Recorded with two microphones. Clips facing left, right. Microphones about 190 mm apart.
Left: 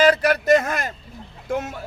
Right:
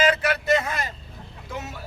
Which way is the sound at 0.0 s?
40° left (ahead or behind).